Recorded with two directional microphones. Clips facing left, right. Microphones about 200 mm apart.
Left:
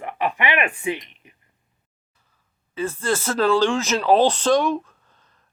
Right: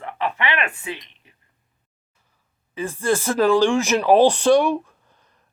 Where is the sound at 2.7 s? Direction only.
15° right (ahead or behind).